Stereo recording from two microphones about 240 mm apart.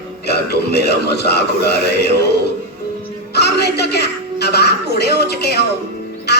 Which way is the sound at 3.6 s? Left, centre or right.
Left.